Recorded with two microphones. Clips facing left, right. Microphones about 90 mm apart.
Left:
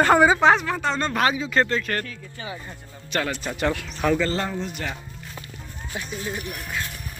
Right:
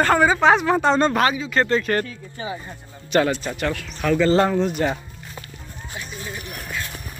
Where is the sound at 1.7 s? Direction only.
20° right (ahead or behind).